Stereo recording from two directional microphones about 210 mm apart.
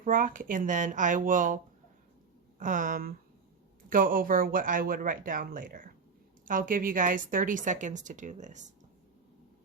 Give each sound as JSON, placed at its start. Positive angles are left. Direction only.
{"t": 0.0, "sound": "a woman's voice", "side_deg": -40}
{"t": 2.6, "sound": "a woman's voice", "side_deg": -40}